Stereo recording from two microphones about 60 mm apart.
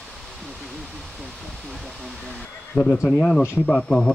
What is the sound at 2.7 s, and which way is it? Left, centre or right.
Speech, left.